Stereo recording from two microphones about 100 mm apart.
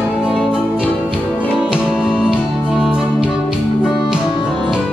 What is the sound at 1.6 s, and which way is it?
Music, 5° right (ahead or behind).